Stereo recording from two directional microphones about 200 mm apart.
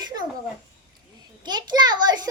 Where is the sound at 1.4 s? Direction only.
20° right (ahead or behind).